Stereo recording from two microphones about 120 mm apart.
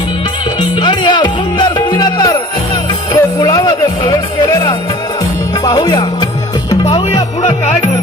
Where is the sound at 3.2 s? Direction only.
30° left (ahead or behind).